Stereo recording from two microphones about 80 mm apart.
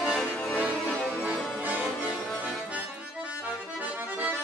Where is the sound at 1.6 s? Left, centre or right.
Right.